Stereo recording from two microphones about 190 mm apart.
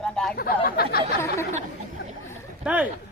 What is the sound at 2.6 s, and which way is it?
Speech, 5° right (ahead or behind).